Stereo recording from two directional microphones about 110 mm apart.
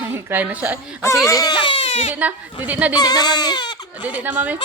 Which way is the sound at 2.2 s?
15° right (ahead or behind).